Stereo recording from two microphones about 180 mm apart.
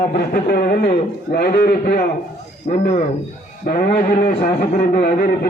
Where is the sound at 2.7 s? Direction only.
45° left (ahead or behind).